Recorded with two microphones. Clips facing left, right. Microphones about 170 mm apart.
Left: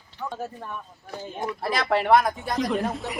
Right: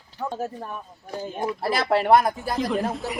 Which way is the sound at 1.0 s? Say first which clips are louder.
Right 4 dB; 15° right (ahead or behind).